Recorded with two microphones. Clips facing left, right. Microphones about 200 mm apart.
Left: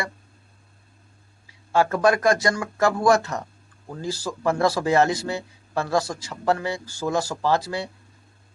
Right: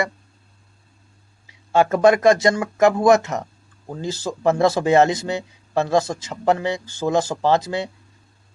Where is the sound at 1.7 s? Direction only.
20° right (ahead or behind).